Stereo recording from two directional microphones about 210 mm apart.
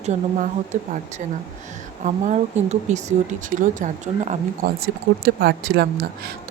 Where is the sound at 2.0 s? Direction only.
35° right (ahead or behind).